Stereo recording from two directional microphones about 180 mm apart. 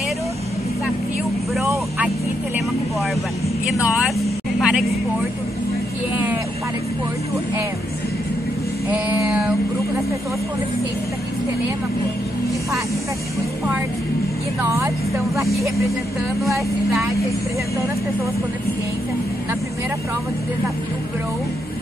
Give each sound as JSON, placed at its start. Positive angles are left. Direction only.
{"t": 4.0, "sound": "vehicle", "side_deg": -5}
{"t": 9.2, "sound": "speech", "side_deg": -5}
{"t": 14.6, "sound": "speech", "side_deg": -15}